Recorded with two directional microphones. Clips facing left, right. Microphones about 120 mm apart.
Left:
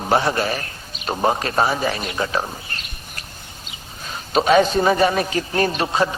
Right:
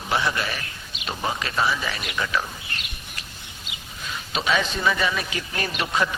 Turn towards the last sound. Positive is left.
turn(degrees=30)  # may be behind; listen again after turning